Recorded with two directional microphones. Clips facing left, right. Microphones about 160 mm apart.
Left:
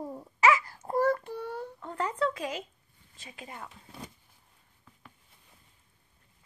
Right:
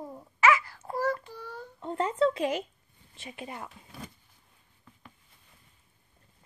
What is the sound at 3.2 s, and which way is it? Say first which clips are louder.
Speech: right 4 dB; 25° right (ahead or behind).